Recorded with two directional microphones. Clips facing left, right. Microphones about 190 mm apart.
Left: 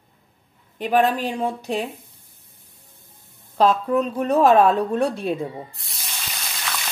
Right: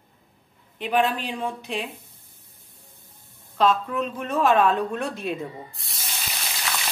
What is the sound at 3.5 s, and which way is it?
Speech, 35° left (ahead or behind).